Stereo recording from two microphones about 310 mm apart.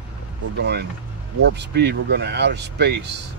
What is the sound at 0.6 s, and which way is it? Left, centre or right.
Speech, right.